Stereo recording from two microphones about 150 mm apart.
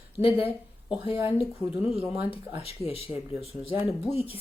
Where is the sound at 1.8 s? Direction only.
40° left (ahead or behind).